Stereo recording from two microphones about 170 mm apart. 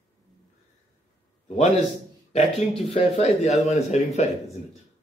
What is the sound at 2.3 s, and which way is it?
Speech, 35° left (ahead or behind).